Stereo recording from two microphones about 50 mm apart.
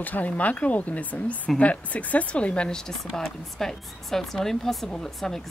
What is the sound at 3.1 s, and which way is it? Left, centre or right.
Speech, centre.